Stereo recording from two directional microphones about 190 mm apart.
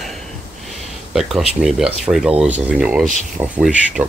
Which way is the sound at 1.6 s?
5° right (ahead or behind).